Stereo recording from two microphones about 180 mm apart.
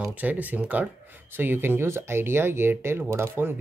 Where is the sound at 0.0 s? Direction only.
10° right (ahead or behind).